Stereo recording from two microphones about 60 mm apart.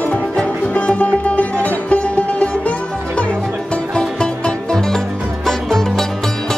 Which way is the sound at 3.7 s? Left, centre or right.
Centre.